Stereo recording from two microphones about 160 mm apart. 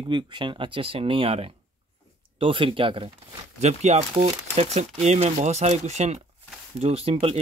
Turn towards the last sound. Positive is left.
turn(degrees=-40)  # may be behind; listen again after turning